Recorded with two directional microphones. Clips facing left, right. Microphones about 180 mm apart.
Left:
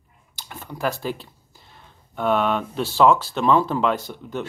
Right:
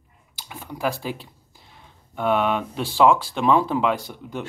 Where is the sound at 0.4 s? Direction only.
10° right (ahead or behind).